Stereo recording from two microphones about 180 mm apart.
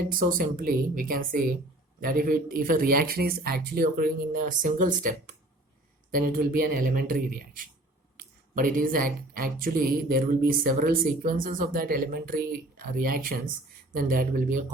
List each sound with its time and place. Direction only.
0.0 s speech: 50° right (ahead or behind)